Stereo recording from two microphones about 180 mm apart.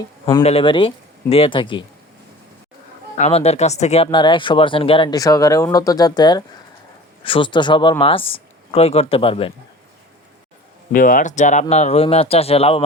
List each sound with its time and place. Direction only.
0.4 s speech: 30° left (ahead or behind)
3.2 s speech: 35° left (ahead or behind)
10.9 s speech: 50° left (ahead or behind); by 12.8 s 35° left (ahead or behind)